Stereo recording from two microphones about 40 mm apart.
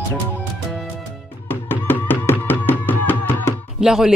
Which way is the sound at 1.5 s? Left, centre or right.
Left.